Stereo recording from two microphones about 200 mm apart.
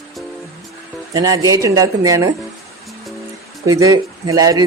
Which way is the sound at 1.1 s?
20° right (ahead or behind).